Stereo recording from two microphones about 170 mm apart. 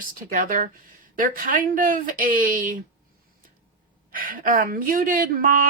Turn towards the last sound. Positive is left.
turn(degrees=-55)  # may be behind; listen again after turning